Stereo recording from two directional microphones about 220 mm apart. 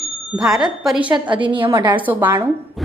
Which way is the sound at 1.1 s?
20° right (ahead or behind).